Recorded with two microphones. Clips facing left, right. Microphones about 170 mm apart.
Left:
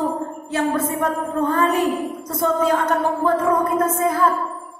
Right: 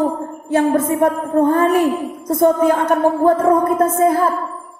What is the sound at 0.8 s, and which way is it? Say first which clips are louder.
A woman's voice: right 6 dB; 55° right (ahead or behind).